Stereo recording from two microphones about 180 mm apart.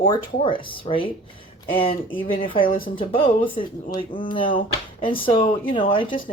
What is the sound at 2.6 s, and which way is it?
Speech, 50° left (ahead or behind).